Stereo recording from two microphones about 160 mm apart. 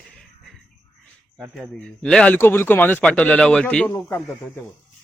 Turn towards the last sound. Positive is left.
turn(degrees=5)  # may be behind; listen again after turning